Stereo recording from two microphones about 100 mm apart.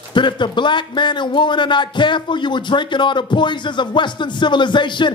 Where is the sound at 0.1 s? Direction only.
50° left (ahead or behind).